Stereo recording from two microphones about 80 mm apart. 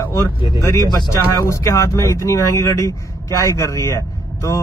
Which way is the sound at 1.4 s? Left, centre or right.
Left.